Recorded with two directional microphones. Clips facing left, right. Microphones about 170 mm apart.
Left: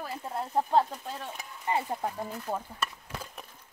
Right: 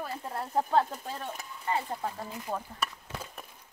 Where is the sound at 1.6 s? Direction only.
20° left (ahead or behind).